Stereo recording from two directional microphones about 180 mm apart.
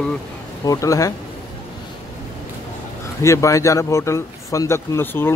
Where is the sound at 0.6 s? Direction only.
20° left (ahead or behind).